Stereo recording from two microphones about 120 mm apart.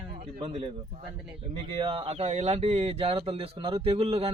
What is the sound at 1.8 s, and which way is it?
Speech, 50° right (ahead or behind).